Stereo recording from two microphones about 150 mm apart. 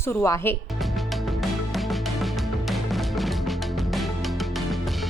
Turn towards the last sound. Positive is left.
turn(degrees=0)  # may be behind; listen again after turning